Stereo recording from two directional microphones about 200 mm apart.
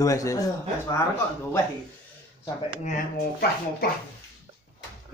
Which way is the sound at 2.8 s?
45° left (ahead or behind).